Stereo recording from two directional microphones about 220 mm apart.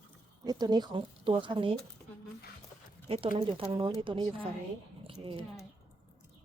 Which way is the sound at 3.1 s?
25° right (ahead or behind).